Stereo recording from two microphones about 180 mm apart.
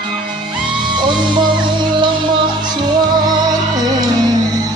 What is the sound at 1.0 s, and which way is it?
Music, 25° right (ahead or behind).